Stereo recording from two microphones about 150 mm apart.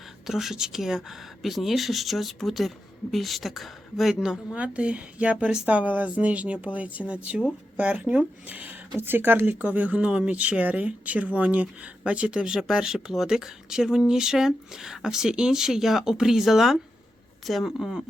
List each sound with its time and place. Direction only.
0.3 s speech: centre (ahead or behind)